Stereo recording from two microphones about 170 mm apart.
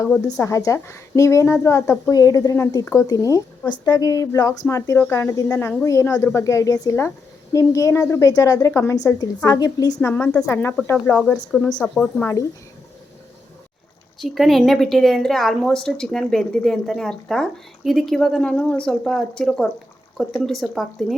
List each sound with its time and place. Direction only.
0.3 s a woman's voice: 20° left (ahead or behind)
10.0 s a woman's voice: 10° left (ahead or behind)
12.2 s a woman's voice: 20° left (ahead or behind)
14.2 s a woman's voice: centre (ahead or behind)